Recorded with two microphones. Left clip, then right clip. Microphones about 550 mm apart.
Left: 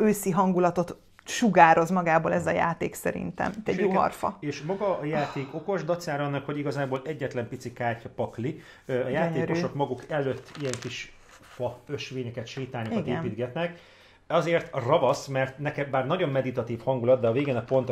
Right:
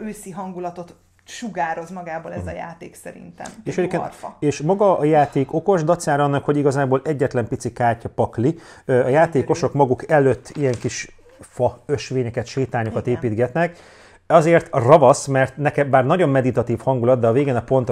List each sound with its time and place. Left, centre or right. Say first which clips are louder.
0.0 s speech: left 8 dB; left
4.4 s speech: right 13 dB; right